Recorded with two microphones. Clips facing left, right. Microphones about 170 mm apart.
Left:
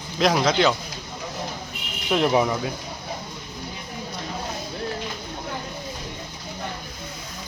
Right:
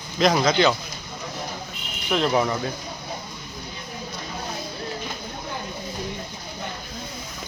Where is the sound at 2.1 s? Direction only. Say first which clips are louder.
Left 1 dB; 15° left (ahead or behind).